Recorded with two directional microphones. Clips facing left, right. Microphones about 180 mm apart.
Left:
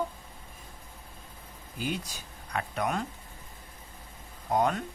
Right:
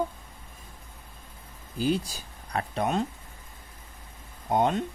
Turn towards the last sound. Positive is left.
turn(degrees=-25)  # may be behind; listen again after turning